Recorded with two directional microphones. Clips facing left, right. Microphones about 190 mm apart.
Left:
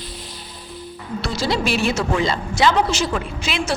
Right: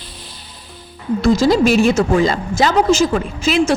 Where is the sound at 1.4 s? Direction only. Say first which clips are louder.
Right 6 dB; 45° right (ahead or behind).